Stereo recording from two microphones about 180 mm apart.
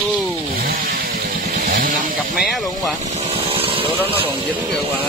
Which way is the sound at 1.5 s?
55° right (ahead or behind).